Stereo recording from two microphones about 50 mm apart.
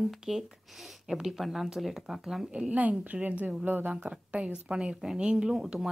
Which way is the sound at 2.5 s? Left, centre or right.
Right.